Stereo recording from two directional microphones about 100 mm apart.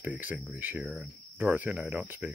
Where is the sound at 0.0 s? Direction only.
15° right (ahead or behind).